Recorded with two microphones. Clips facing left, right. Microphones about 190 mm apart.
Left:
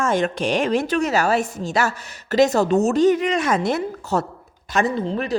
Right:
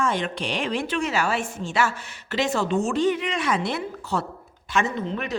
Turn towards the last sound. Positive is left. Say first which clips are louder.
# left 5 dB
turn(degrees=35)  # may be behind; listen again after turning